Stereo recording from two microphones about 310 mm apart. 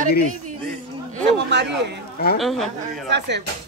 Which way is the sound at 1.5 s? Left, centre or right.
Right.